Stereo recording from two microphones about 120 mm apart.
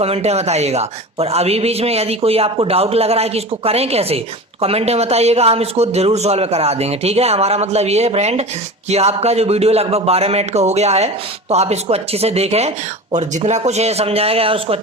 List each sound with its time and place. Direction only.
0.0 s a man's voice: 60° right (ahead or behind); by 13.6 s 80° right
13.7 s a man's voice: 65° right (ahead or behind)